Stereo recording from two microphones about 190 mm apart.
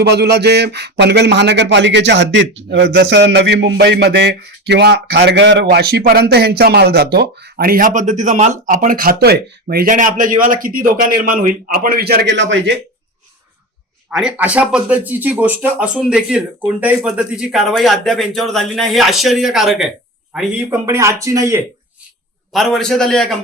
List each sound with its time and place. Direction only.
0.0 s speech: 60° right (ahead or behind)
5.6 s speech: 55° right (ahead or behind)
14.1 s speech: 5° right (ahead or behind)
20.8 s speech: 15° right (ahead or behind)
22.5 s speech: centre (ahead or behind)